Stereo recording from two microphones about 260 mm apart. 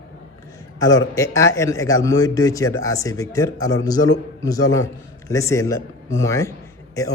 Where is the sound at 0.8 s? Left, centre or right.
Centre.